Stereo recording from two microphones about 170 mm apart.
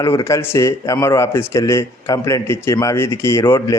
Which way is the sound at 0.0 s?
15° left (ahead or behind).